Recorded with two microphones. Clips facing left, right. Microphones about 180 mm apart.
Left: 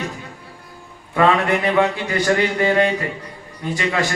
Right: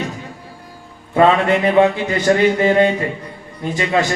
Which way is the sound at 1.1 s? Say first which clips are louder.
Right 3 dB; 25° right (ahead or behind).